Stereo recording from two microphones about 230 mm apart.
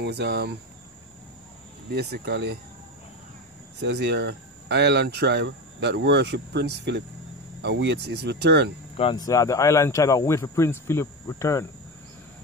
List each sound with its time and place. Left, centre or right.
0.0 s speech: right
1.9 s speech: right
3.8 s speech: right
8.9 s speech: left